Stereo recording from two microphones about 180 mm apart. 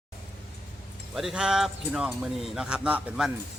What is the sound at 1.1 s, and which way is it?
A man's voice, 5° right (ahead or behind).